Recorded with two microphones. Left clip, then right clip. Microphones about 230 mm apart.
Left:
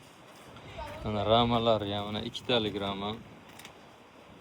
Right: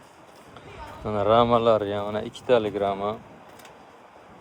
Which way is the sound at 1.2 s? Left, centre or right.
Right.